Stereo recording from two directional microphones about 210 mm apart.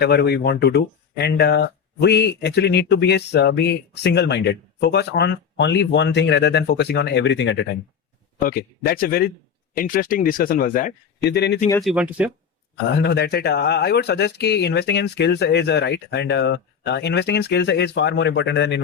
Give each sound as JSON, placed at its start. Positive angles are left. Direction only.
{"t": 0.0, "sound": "speech", "side_deg": 50}
{"t": 8.4, "sound": "speech", "side_deg": 45}
{"t": 11.8, "sound": "speech", "side_deg": -5}
{"t": 12.9, "sound": "speech", "side_deg": 50}